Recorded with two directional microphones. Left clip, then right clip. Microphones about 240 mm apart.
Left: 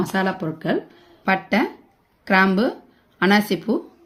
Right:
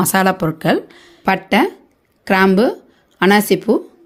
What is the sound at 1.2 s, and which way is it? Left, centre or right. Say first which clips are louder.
Speech: right 5 dB; right.